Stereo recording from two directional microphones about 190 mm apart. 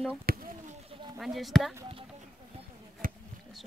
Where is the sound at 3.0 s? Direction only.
45° right (ahead or behind).